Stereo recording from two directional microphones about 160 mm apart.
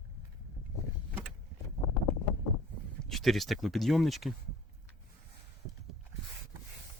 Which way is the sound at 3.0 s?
Centre (ahead or behind).